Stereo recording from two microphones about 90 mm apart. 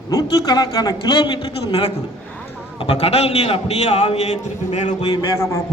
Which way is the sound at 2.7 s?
90° left.